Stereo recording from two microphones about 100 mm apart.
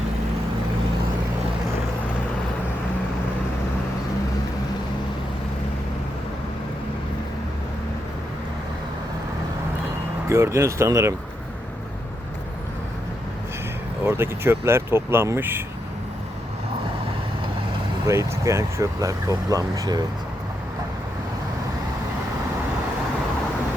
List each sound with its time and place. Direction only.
10.2 s speech: 30° right (ahead or behind)
14.0 s speech: 25° right (ahead or behind)
18.0 s speech: 30° right (ahead or behind)